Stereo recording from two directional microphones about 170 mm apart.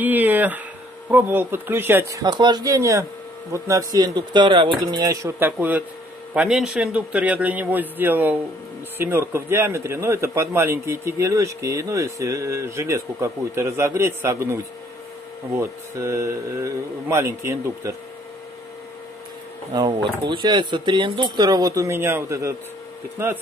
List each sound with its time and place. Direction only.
0.0 s a man's voice: 10° right (ahead or behind)
19.7 s a man's voice: 25° right (ahead or behind)